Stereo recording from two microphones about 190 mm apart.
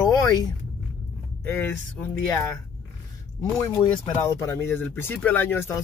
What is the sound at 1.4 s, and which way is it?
Speech, 10° left (ahead or behind).